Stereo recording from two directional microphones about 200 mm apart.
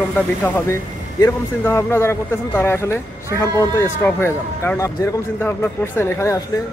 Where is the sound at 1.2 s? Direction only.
15° left (ahead or behind).